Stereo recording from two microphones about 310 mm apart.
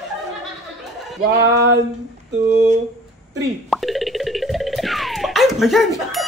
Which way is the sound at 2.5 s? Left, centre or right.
Right.